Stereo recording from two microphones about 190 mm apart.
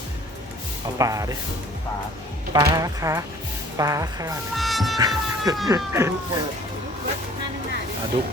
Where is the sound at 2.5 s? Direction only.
20° right (ahead or behind).